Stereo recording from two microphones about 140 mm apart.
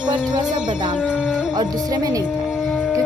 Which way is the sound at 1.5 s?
25° right (ahead or behind).